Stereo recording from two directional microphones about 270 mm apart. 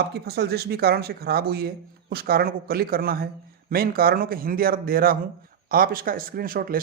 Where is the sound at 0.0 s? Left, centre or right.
Right.